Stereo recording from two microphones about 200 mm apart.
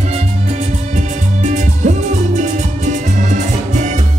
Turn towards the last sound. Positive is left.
turn(degrees=-35)  # may be behind; listen again after turning